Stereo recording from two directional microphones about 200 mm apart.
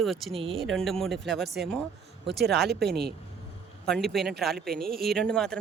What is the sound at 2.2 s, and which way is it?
Speech, 55° right (ahead or behind).